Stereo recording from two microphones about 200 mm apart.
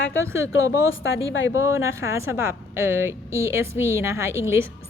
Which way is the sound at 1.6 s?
15° right (ahead or behind).